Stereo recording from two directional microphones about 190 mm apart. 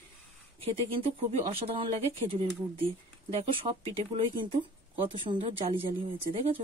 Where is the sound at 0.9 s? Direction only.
30° right (ahead or behind).